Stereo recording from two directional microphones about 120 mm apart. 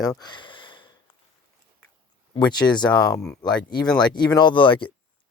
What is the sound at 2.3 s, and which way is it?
Speech, 35° left (ahead or behind).